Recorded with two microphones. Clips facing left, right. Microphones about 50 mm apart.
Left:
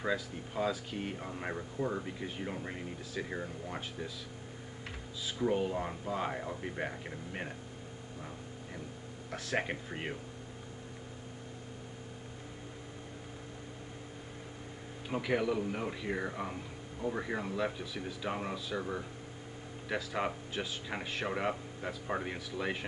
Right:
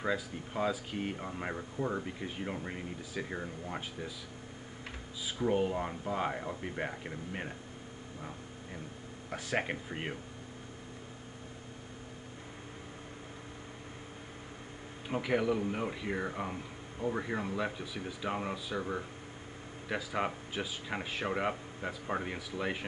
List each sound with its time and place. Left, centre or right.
0.0 s speech: centre
5.2 s speech: centre
9.3 s speech: centre
15.0 s speech: centre